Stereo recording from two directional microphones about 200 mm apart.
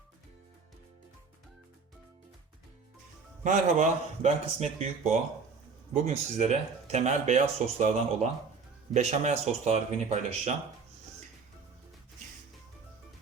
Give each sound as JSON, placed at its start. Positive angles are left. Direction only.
{"t": 3.4, "sound": "speech", "side_deg": -40}
{"t": 5.9, "sound": "speech", "side_deg": -35}